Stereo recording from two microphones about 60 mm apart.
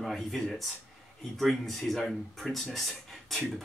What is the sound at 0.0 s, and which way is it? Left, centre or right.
Speech, centre.